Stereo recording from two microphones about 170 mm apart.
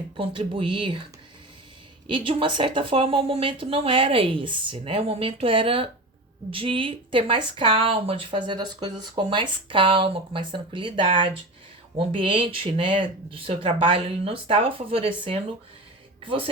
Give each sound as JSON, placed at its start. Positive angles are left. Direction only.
{"t": 0.2, "sound": "speech", "side_deg": -30}
{"t": 2.0, "sound": "speech", "side_deg": -30}